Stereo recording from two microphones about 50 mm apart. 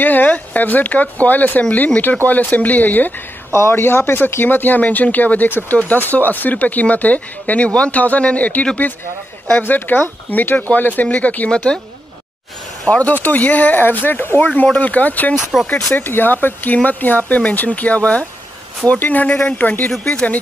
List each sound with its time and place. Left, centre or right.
0.0 s speech: left
3.5 s a man's voice: left
12.9 s speech: left
15.5 s speech: centre
15.9 s speech: left
20.1 s speech: left